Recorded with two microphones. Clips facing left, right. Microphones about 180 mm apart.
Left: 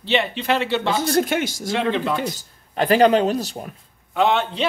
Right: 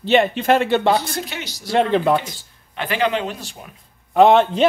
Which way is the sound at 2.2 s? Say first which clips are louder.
Left 9 dB; 40° left (ahead or behind).